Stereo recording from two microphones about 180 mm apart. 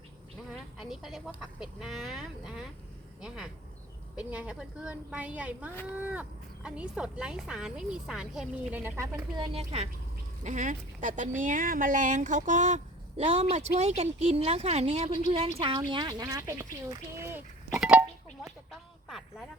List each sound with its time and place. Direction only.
0.8 s a woman's voice: centre (ahead or behind); by 16.6 s 20° right (ahead or behind)
16.9 s chink: 15° right (ahead or behind)
19.0 s a sound: centre (ahead or behind)